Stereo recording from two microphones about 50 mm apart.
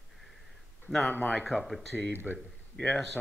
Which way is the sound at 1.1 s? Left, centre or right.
Left.